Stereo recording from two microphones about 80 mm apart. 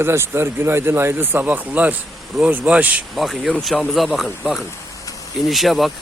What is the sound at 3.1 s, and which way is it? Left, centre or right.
Speech, centre.